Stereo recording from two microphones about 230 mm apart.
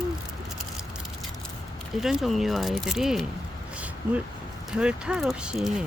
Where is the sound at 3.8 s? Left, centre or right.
Centre.